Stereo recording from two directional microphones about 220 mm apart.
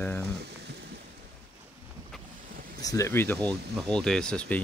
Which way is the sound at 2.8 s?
15° left (ahead or behind).